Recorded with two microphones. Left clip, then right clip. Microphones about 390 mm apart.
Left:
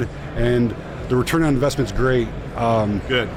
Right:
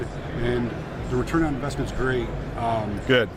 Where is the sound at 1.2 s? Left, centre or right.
Left.